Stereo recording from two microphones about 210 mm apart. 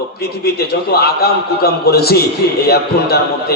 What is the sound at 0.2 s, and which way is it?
A man's voice, 50° left (ahead or behind).